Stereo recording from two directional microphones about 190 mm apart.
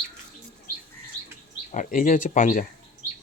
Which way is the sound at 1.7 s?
45° left (ahead or behind).